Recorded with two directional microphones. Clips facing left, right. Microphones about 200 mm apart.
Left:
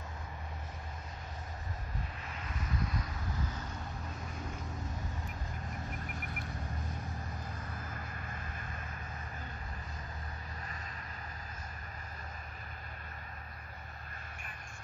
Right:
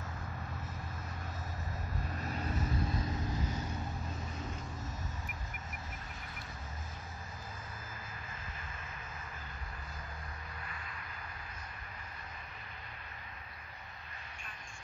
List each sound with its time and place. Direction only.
2.1 s vehicle: 40° right (ahead or behind)